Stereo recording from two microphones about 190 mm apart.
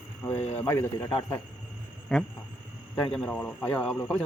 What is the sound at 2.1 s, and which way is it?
A man's voice, centre (ahead or behind).